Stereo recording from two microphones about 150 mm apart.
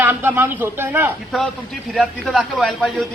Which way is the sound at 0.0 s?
15° right (ahead or behind).